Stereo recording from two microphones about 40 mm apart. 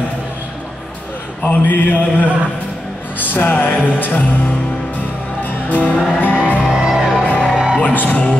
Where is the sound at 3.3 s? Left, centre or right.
Left.